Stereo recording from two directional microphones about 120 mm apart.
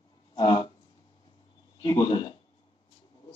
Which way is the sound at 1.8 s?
40° left (ahead or behind).